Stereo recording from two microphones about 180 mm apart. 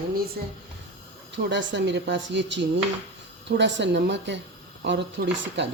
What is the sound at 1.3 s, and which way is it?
Speech, 80° right.